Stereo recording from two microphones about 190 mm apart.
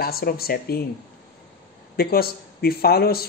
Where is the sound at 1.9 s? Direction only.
55° left (ahead or behind).